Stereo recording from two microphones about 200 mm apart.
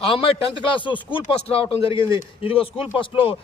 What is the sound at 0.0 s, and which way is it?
A man's voice, 25° left (ahead or behind).